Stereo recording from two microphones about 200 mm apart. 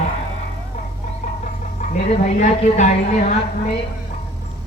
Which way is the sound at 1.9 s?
35° left (ahead or behind).